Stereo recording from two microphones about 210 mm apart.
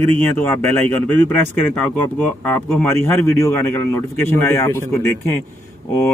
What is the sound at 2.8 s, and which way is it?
Speech, 10° left (ahead or behind).